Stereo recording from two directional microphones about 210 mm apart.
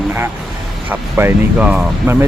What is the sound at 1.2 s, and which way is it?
Speech, 10° right (ahead or behind).